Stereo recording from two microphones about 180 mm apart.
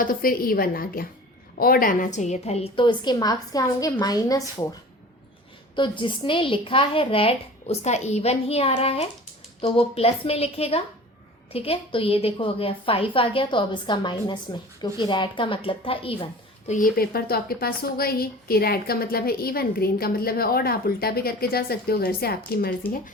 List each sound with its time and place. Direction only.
0.0 s a woman's voice: 50° left (ahead or behind); by 4.4 s 20° left (ahead or behind)
5.7 s a woman's voice: 25° left (ahead or behind)
16.6 s a woman's voice: 45° left (ahead or behind)